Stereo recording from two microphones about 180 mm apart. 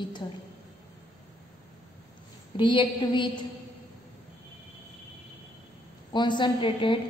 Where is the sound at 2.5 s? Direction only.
25° left (ahead or behind).